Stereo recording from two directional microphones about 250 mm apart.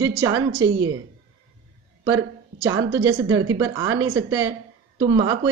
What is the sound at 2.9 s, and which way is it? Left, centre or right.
Speech, centre.